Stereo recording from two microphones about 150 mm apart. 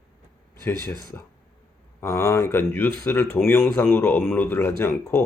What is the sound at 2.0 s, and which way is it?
A man's voice, 20° left (ahead or behind).